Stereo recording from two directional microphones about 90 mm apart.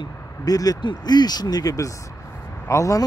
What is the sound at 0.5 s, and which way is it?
Speech, 45° left (ahead or behind).